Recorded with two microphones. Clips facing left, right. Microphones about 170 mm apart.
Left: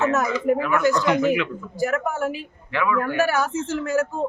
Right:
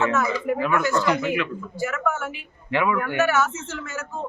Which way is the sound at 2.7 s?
20° right (ahead or behind).